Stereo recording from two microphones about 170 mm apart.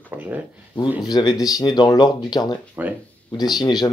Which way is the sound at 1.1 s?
20° left (ahead or behind).